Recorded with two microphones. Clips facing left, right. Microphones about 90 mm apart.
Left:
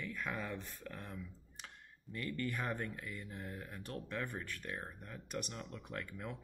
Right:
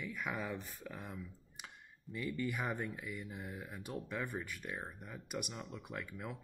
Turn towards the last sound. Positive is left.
turn(degrees=-5)  # may be behind; listen again after turning